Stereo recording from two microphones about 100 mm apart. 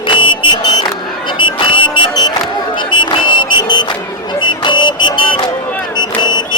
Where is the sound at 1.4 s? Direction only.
55° left (ahead or behind).